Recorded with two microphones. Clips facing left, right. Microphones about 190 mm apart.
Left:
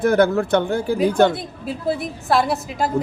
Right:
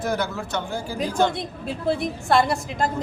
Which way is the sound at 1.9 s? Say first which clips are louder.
Even; centre (ahead or behind).